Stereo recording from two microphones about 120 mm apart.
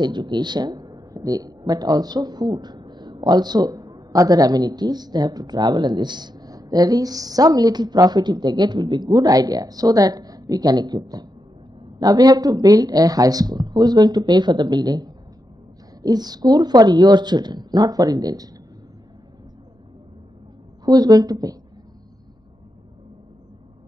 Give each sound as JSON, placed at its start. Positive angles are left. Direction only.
{"t": 0.0, "sound": "speech", "side_deg": -40}
{"t": 20.8, "sound": "speech", "side_deg": -35}